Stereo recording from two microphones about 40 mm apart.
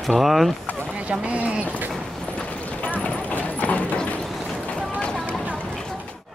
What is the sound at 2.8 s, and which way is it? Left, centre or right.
Clip-clop, left.